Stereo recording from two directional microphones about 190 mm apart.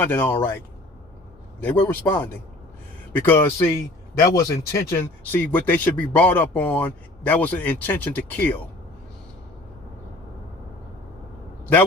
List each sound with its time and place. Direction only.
0.0 s speech: 10° left (ahead or behind)
1.6 s speech: 10° left (ahead or behind)